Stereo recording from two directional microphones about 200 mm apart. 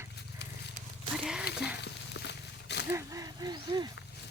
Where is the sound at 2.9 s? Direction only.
15° right (ahead or behind).